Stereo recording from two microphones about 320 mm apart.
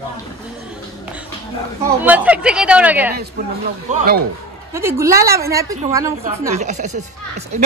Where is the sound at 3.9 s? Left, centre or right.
Right.